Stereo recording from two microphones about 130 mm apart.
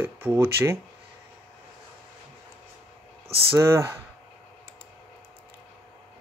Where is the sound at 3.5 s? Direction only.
20° right (ahead or behind).